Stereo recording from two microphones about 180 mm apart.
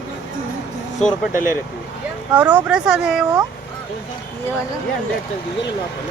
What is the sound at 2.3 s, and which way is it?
Speech, 10° right (ahead or behind).